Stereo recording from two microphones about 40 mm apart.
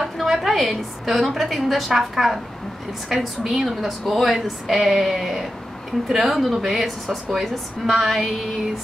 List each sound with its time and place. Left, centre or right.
0.0 s a woman's voice: centre
4.9 s a sound: centre
6.3 s a woman's voice: centre